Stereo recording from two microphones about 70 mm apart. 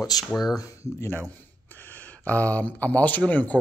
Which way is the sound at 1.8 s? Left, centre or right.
Left.